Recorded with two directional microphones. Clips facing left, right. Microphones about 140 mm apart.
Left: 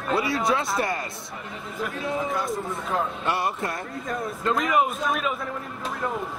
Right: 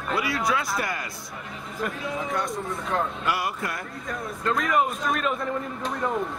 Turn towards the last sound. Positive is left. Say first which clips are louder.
# even
turn(degrees=0)  # may be behind; listen again after turning